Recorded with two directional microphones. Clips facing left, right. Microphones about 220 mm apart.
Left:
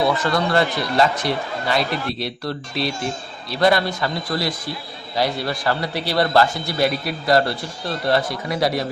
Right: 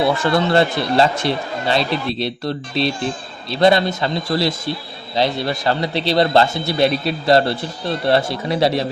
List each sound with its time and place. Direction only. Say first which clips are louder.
0.0 s a man's voice: right 3 dB; 25° right (ahead or behind)